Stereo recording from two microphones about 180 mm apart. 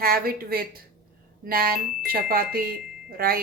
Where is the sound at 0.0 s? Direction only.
55° right (ahead or behind).